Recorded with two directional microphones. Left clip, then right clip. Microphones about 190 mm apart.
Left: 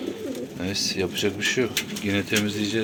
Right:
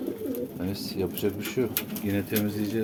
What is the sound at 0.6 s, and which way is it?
Speech, 10° right (ahead or behind).